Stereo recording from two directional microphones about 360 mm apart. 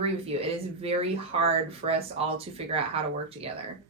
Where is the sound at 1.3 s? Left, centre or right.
Centre.